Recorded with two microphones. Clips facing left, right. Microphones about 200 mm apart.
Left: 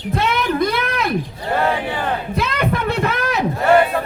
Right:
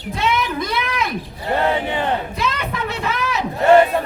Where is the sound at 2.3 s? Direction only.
55° left (ahead or behind).